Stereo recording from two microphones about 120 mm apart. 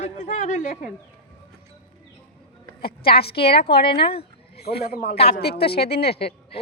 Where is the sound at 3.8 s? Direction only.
50° left (ahead or behind).